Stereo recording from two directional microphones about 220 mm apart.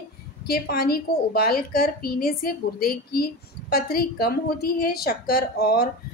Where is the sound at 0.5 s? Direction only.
45° left (ahead or behind).